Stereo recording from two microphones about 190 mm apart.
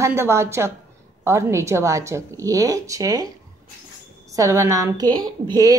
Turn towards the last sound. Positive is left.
turn(degrees=-20)  # may be behind; listen again after turning